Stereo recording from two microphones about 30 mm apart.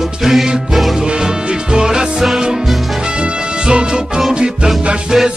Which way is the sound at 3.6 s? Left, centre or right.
Right.